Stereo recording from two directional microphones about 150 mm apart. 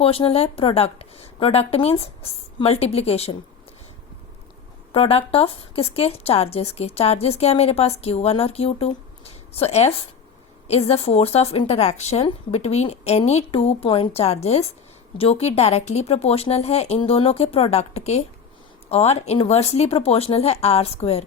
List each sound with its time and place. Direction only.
0.0 s a woman's voice: 40° left (ahead or behind)
4.9 s speech: 40° left (ahead or behind)